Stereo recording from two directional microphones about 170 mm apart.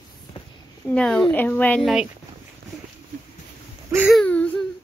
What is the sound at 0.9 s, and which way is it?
Speech, 5° left (ahead or behind).